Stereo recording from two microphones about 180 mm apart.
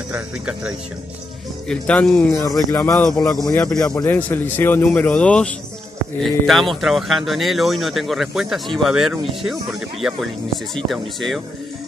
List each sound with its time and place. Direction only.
0.1 s speech: 5° right (ahead or behind)
1.7 s speech: 5° left (ahead or behind)
3.5 s speech: 5° left (ahead or behind)